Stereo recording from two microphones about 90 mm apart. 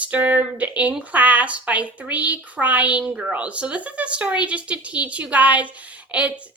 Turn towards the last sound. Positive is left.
turn(degrees=-15)  # may be behind; listen again after turning